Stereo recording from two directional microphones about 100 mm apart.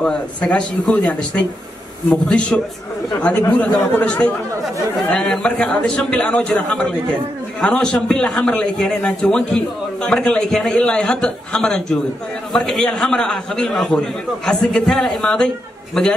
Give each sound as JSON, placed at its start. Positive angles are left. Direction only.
{"t": 0.0, "sound": "a man's voice", "side_deg": 10}